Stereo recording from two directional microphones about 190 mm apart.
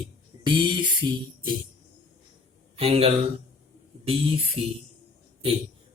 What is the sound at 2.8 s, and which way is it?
Speech, 30° right (ahead or behind).